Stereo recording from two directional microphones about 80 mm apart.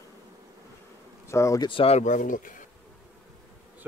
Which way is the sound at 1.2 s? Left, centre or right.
Left.